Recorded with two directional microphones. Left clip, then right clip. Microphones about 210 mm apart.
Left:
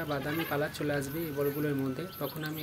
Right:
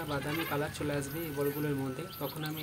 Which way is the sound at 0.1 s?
10° left (ahead or behind).